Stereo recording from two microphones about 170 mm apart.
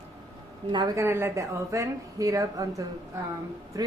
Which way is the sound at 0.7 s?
25° right (ahead or behind).